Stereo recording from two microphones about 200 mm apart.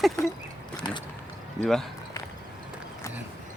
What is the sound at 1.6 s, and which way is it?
Speech, 5° left (ahead or behind).